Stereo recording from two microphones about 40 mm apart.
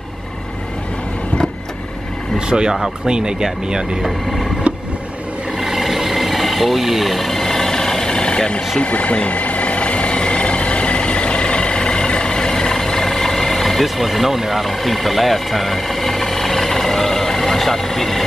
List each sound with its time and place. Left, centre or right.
2.3 s speech: right
4.0 s speech: centre
5.6 s vehicle: centre; by 8.6 s left
8.7 s vehicle: left; by 18.2 s centre